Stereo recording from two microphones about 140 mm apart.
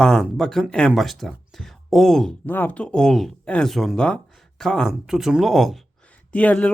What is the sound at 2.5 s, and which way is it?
Speech, 10° left (ahead or behind).